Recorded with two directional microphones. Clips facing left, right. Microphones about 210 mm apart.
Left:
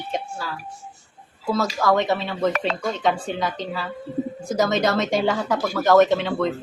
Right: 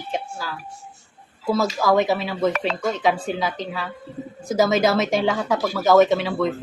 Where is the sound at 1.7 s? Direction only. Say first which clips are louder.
Even; 5° right (ahead or behind).